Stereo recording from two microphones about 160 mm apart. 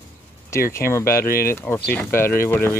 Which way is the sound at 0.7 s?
15° left (ahead or behind).